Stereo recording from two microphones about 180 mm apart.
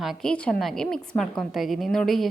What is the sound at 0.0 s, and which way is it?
A woman's voice, centre (ahead or behind).